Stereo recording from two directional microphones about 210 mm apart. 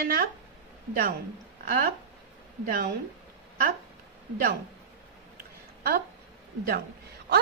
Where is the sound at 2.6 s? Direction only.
45° right (ahead or behind).